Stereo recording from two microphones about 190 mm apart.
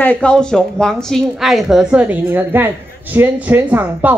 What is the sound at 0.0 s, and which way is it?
A woman's voice, 5° left (ahead or behind).